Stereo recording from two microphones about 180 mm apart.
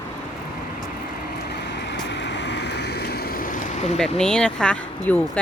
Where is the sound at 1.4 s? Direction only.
70° left (ahead or behind); by 3.9 s 45° left (ahead or behind).